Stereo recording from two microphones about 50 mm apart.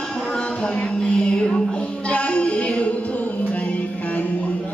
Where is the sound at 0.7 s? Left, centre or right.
Left.